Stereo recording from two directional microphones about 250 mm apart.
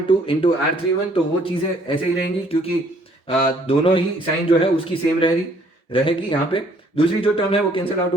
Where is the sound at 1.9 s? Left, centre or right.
Centre.